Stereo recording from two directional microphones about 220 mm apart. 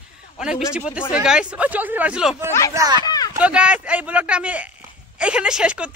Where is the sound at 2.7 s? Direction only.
15° right (ahead or behind).